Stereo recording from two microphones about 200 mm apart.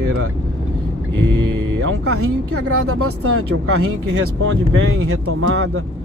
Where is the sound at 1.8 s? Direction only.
90° right.